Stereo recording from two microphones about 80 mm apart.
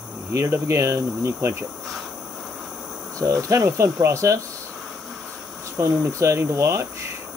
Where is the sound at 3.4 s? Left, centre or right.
Right.